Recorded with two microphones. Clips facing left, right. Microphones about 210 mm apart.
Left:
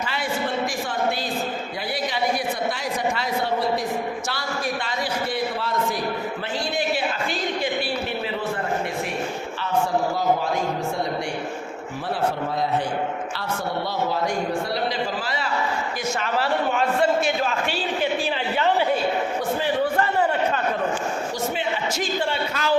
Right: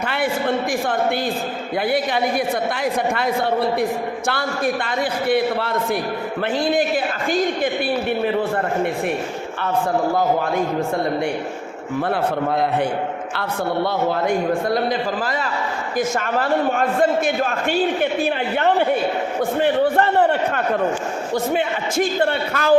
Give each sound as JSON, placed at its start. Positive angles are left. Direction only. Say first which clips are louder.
{"t": 0.0, "sound": "a man's voice", "louder": "right 5 dB", "side_deg": -60}
{"t": 2.7, "sound": "a man's voice", "louder": "right 5 dB", "side_deg": -55}
{"t": 13.8, "sound": "a man's voice", "louder": "right 4 dB", "side_deg": -55}
{"t": 19.5, "sound": "a sound", "louder": "right 7 dB", "side_deg": -60}
{"t": 21.5, "sound": "a man's voice", "louder": "right 5 dB", "side_deg": -55}